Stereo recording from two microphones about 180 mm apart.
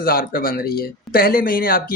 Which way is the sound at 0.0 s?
55° left (ahead or behind).